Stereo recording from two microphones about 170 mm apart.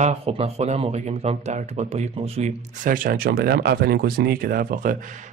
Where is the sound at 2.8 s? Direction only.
55° right (ahead or behind).